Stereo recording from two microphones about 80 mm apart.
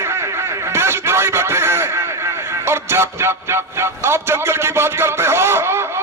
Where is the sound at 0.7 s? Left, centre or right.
Right.